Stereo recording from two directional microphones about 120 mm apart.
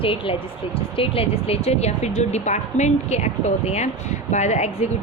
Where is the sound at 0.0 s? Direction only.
50° left (ahead or behind).